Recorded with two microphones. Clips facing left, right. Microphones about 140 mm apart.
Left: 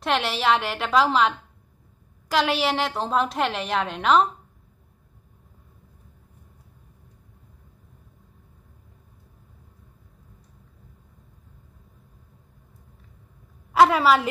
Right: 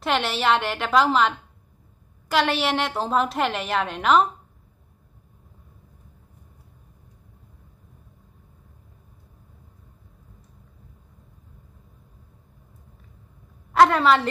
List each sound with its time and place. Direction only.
0.0 s a woman's voice: centre (ahead or behind)
13.7 s a woman's voice: 5° left (ahead or behind)